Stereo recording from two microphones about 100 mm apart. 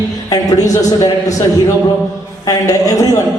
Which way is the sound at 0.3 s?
35° left (ahead or behind).